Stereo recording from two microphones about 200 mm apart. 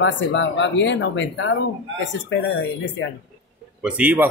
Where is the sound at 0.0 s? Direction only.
65° left (ahead or behind).